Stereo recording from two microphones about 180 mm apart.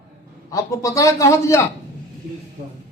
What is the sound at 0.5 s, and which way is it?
A man's voice, 20° left (ahead or behind).